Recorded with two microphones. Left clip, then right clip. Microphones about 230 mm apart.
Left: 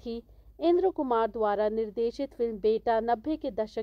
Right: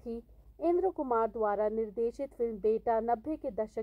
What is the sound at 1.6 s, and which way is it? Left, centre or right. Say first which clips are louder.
Speech: left 3 dB; left.